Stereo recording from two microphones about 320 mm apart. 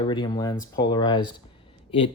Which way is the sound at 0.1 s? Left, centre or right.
Centre.